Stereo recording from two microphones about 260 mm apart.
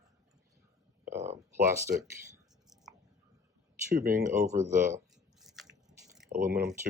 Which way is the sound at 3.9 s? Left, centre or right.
Right.